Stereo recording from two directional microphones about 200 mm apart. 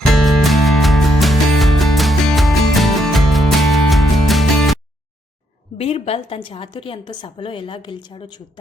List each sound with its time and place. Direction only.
0.1 s music: centre (ahead or behind)
5.7 s a woman's voice: 30° left (ahead or behind)